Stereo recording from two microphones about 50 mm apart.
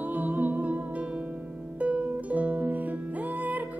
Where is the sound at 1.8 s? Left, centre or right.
Right.